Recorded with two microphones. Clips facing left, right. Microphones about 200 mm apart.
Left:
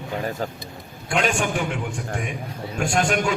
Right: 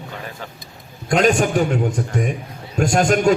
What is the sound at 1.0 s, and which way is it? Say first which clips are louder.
A man's voice: right 7 dB; 40° right (ahead or behind).